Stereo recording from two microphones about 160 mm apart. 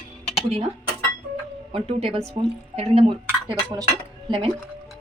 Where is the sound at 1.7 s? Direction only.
35° right (ahead or behind).